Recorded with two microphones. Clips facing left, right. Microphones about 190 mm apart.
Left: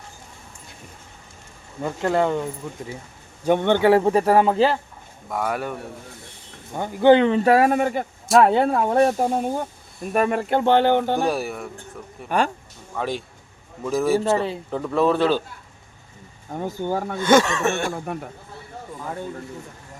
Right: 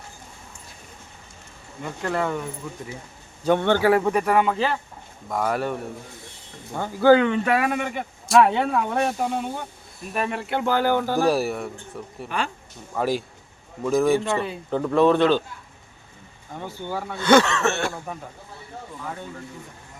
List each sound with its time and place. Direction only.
2.0 s speech: 25° left (ahead or behind)
3.4 s speech: 15° left (ahead or behind); by 4.8 s 35° left (ahead or behind)
5.3 s speech: centre (ahead or behind)
6.7 s speech: 20° left (ahead or behind); by 10.7 s 40° left (ahead or behind)
10.7 s speech: 25° left (ahead or behind)
11.3 s speech: centre (ahead or behind)
14.2 s speech: 40° left (ahead or behind)
14.7 s speech: centre (ahead or behind)
16.5 s speech: 45° left (ahead or behind)
17.2 s a sound: 15° left (ahead or behind)